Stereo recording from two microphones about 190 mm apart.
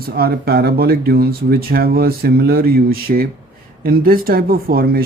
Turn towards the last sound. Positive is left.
turn(degrees=-50)  # may be behind; listen again after turning